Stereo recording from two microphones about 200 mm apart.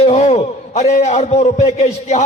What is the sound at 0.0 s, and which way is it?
A man's voice, 30° left (ahead or behind).